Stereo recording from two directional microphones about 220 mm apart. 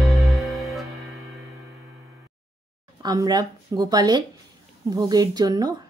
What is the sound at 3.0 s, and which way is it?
A woman's voice, 15° right (ahead or behind).